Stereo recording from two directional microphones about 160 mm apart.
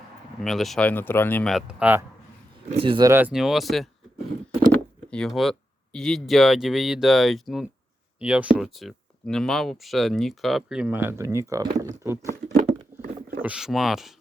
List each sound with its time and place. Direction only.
0.4 s speech: centre (ahead or behind)
1.5 s speech: 5° right (ahead or behind)
2.7 s speech: 30° right (ahead or behind)
3.1 s speech: 10° right (ahead or behind)
5.1 s speech: 5° left (ahead or behind); by 12.2 s 20° right (ahead or behind)
13.4 s speech: 5° right (ahead or behind)